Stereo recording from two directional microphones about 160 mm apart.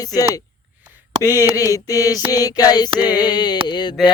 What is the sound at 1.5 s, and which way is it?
Mantra, 20° left (ahead or behind).